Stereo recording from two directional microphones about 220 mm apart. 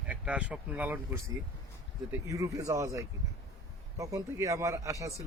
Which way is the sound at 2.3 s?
15° right (ahead or behind).